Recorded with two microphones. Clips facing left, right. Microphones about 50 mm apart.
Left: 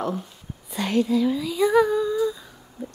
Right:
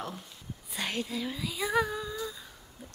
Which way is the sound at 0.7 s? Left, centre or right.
Centre.